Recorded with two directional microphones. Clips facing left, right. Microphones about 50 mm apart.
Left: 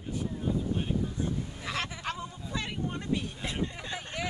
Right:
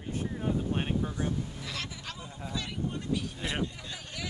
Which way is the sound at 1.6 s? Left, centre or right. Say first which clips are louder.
Left 5 dB; left.